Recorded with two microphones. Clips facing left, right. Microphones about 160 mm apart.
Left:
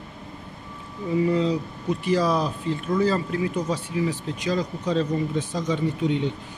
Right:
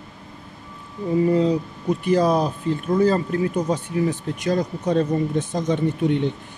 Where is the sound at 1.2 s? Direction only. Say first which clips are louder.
Right 4 dB; 45° right (ahead or behind).